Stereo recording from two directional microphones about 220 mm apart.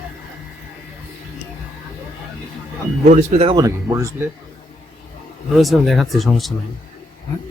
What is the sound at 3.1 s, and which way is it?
Speech, 30° right (ahead or behind).